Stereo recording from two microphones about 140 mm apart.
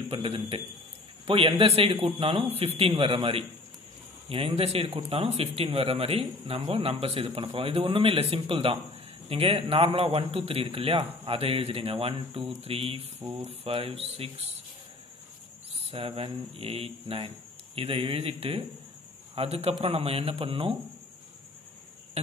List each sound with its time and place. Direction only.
0.1 s speech: 40° right (ahead or behind)
13.2 s speech: 20° right (ahead or behind)
13.5 s speech: 45° right (ahead or behind)
15.9 s speech: 40° right (ahead or behind)